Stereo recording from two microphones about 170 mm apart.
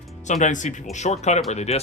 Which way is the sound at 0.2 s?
45° left (ahead or behind).